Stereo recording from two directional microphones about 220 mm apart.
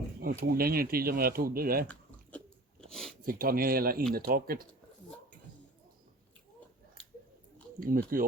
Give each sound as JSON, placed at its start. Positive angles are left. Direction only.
{"t": 0.2, "sound": "speech", "side_deg": -40}
{"t": 2.8, "sound": "speech", "side_deg": 0}
{"t": 3.2, "sound": "speech", "side_deg": -40}
{"t": 7.8, "sound": "speech", "side_deg": -40}